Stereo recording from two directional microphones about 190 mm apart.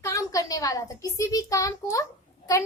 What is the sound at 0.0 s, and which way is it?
A woman's voice, 15° left (ahead or behind).